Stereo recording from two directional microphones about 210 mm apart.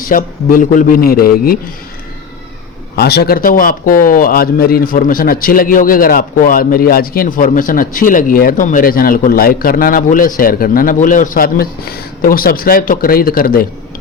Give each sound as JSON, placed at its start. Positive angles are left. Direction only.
{"t": 0.0, "sound": "speech", "side_deg": 40}
{"t": 2.9, "sound": "speech", "side_deg": 50}